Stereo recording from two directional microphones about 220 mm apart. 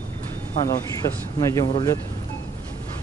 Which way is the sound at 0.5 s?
15° left (ahead or behind).